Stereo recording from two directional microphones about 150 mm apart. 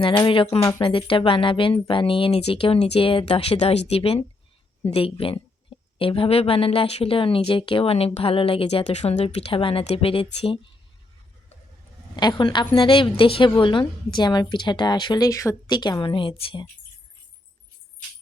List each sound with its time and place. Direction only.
0.0 s speech: 35° left (ahead or behind)
12.1 s a woman's voice: 30° left (ahead or behind)